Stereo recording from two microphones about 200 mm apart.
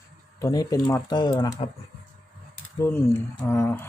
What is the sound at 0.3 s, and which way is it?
Speech, 15° left (ahead or behind).